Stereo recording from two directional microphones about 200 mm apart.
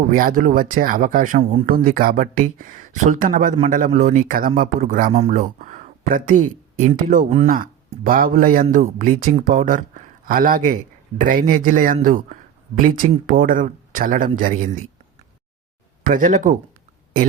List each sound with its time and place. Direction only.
0.1 s speech: 45° right (ahead or behind)
16.0 s speech: 45° right (ahead or behind)